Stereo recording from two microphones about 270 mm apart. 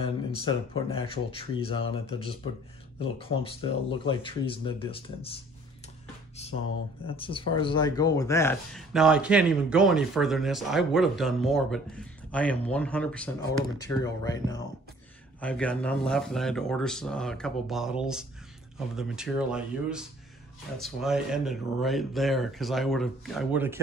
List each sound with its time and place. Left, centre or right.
0.0 s speech: left
7.1 s speech: centre